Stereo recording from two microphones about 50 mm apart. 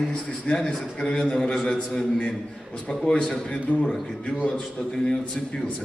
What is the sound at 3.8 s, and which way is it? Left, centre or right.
A man's voice, centre.